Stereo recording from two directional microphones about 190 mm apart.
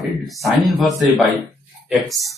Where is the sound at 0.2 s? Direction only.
Centre (ahead or behind).